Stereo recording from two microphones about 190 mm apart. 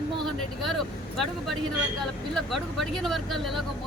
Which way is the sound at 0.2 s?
Centre (ahead or behind).